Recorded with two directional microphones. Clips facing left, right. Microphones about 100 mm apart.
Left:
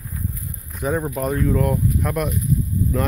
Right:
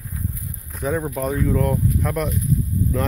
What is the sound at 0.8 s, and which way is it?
Speech, 5° left (ahead or behind).